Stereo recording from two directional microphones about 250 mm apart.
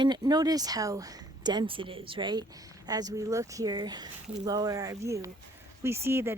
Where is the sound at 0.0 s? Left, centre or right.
Centre.